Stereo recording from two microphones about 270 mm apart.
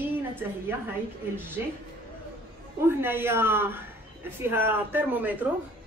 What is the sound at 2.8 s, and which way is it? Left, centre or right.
A woman's voice, centre.